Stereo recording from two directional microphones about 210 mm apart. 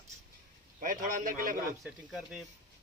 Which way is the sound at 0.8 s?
40° right (ahead or behind).